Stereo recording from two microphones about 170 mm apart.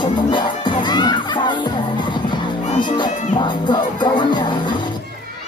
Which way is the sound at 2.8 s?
25° left (ahead or behind).